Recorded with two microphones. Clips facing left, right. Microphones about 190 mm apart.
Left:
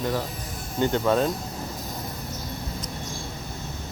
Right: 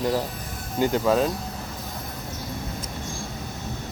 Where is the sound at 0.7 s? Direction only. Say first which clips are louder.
Right 1 dB; 5° right (ahead or behind).